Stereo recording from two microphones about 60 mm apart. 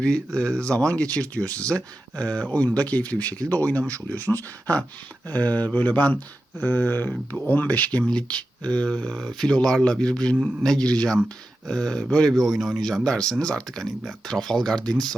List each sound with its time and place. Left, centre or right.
0.3 s speech: centre
12.3 s speech: centre